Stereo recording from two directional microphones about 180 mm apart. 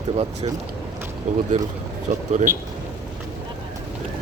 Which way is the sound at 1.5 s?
40° right (ahead or behind).